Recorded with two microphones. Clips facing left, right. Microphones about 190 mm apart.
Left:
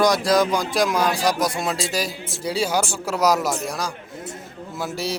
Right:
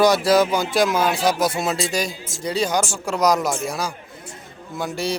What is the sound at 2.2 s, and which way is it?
Speech, 60° left (ahead or behind).